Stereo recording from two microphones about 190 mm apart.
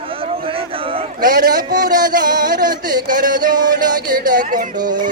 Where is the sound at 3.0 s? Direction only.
45° right (ahead or behind).